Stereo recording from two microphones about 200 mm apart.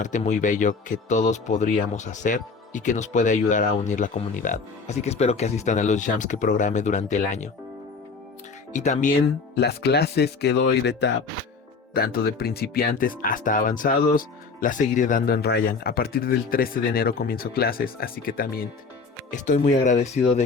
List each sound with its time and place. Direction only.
0.0 s speech: 40° left (ahead or behind)
8.7 s speech: 35° left (ahead or behind)
9.6 s speech: 55° left (ahead or behind); by 20.4 s 35° left (ahead or behind)